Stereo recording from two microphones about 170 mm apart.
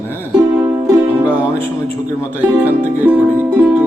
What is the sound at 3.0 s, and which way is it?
Music, 10° right (ahead or behind).